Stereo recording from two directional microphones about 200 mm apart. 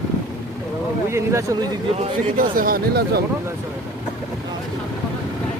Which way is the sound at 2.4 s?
45° right (ahead or behind).